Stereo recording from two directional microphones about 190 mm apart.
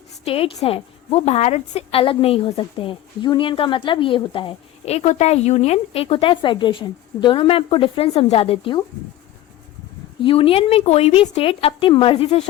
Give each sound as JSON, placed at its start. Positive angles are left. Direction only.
{"t": 0.3, "sound": "a woman's voice", "side_deg": 30}
{"t": 10.2, "sound": "a woman's voice", "side_deg": 30}